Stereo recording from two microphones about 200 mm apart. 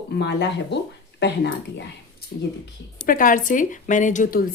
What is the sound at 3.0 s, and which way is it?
A woman's voice, 45° left (ahead or behind).